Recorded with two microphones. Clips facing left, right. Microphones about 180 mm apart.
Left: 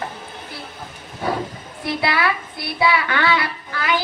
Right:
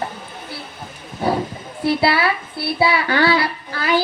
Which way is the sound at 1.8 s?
35° right (ahead or behind).